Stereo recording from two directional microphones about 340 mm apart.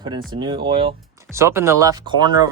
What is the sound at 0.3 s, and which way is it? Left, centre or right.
Speech, centre.